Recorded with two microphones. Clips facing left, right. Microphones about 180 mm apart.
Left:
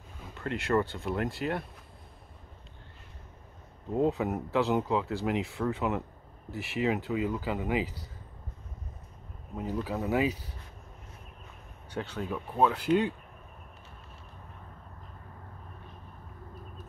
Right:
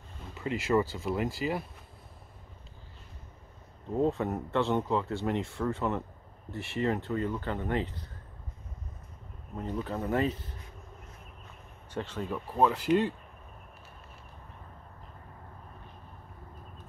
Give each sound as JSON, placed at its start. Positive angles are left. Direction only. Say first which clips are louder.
{"t": 0.2, "sound": "speech", "louder": "right 1 dB", "side_deg": 0}
{"t": 3.9, "sound": "speech", "louder": "left 1 dB", "side_deg": 5}
{"t": 9.6, "sound": "speech", "louder": "left 1 dB", "side_deg": 5}
{"t": 11.9, "sound": "speech", "louder": "even", "side_deg": 0}